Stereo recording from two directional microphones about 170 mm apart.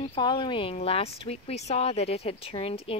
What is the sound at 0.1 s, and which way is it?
Speech, 30° left (ahead or behind).